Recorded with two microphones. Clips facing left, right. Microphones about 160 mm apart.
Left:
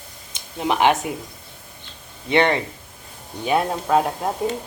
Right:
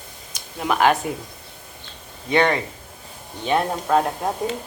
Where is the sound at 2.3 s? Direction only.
20° left (ahead or behind).